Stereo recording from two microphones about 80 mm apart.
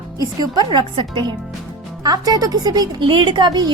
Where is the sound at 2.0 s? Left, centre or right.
Right.